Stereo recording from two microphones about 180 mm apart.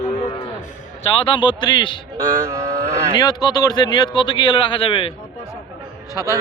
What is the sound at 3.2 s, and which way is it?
Speech, 25° left (ahead or behind).